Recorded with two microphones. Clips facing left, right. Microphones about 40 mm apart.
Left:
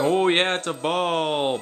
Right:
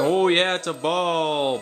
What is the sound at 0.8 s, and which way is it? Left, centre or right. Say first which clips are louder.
Speech: right 1 dB; left.